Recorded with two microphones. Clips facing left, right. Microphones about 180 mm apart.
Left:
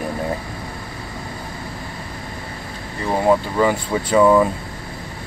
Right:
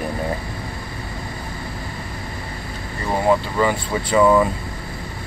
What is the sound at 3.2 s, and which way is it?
Speech, centre (ahead or behind).